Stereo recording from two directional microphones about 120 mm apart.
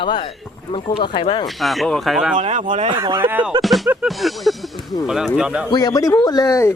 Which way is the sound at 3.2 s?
15° right (ahead or behind).